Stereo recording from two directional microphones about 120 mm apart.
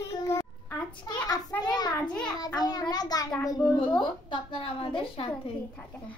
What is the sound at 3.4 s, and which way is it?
A woman's voice, 40° left (ahead or behind).